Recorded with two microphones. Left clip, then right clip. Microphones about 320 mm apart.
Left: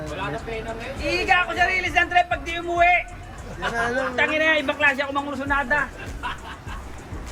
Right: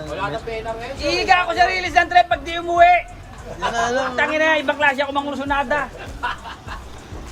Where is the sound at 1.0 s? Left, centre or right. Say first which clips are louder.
Right 4 dB; centre.